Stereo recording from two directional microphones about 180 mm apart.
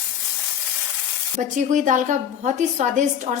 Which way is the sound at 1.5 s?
45° right (ahead or behind).